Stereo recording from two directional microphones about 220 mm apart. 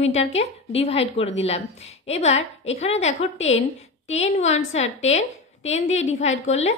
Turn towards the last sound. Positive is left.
turn(degrees=30)  # may be behind; listen again after turning